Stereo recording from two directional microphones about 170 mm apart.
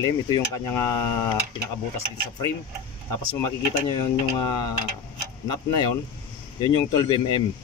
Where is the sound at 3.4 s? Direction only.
25° left (ahead or behind).